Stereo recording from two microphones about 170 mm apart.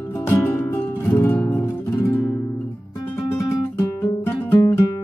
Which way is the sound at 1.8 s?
20° left (ahead or behind).